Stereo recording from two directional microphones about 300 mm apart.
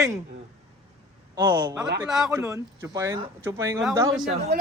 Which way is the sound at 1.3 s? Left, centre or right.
Centre.